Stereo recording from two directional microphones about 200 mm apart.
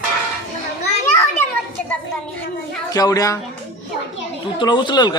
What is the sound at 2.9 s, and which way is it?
Speech, 20° left (ahead or behind).